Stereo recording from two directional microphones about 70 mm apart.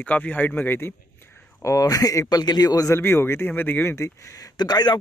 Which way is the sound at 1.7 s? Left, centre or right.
Left.